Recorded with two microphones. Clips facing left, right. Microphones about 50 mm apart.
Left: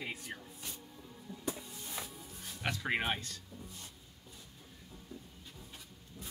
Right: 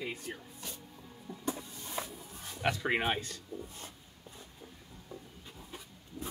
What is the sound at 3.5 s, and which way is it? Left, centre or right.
Speech, right.